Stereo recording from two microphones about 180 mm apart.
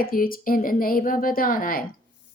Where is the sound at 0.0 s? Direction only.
55° left (ahead or behind).